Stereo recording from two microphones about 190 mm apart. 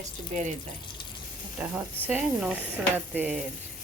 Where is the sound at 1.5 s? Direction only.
10° right (ahead or behind).